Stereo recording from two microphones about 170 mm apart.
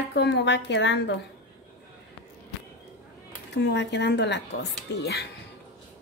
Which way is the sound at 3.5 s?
90° left.